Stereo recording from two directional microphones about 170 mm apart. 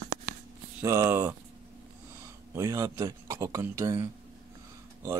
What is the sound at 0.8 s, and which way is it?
Speech, 15° right (ahead or behind).